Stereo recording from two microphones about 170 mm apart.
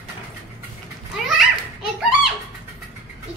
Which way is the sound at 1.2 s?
Centre (ahead or behind).